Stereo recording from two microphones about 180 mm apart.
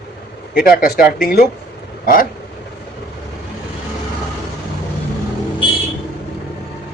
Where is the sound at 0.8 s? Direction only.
55° left (ahead or behind).